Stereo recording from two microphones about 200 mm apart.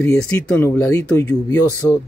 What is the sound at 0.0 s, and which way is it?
Speech, 10° left (ahead or behind).